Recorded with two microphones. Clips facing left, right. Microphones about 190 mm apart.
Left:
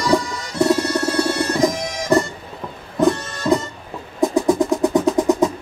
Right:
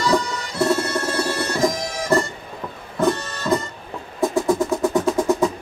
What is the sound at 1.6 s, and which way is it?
Bagpipes, 15° left (ahead or behind).